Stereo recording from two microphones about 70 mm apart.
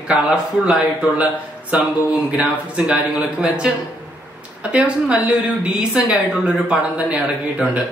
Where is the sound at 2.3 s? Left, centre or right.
Centre.